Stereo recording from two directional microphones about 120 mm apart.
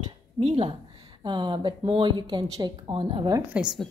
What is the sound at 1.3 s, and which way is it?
Speech, 40° right (ahead or behind).